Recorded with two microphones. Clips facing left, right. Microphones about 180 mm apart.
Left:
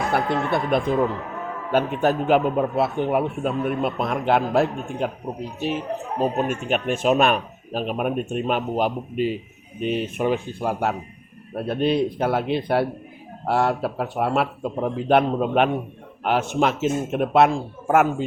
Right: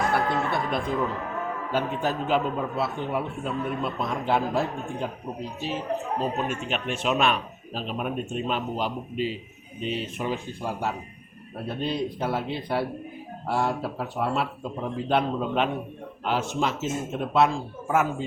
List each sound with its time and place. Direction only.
0.1 s a man's voice: 60° left (ahead or behind)